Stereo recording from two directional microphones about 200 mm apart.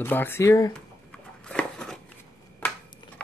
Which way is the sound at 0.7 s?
5° left (ahead or behind).